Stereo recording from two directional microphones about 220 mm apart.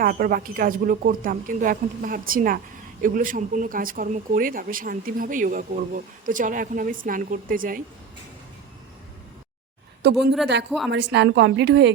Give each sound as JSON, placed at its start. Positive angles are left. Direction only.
{"t": 0.0, "sound": "speech", "side_deg": -40}
{"t": 10.0, "sound": "a woman's voice", "side_deg": -50}
{"t": 10.7, "sound": "a woman's voice", "side_deg": 0}
{"t": 10.9, "sound": "a woman's voice", "side_deg": -55}